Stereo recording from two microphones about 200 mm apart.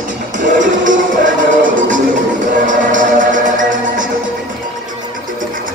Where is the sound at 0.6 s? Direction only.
40° right (ahead or behind).